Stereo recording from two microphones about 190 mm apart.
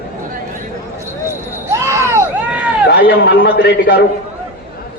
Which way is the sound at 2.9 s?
60° left (ahead or behind).